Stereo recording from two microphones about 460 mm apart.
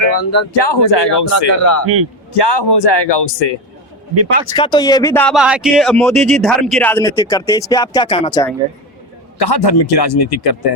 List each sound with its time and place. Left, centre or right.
0.2 s speech: left
0.5 s a man's voice: left
1.5 s speech: left
2.3 s a man's voice: left
4.1 s speech: right
4.5 s speech: centre
9.4 s speech: left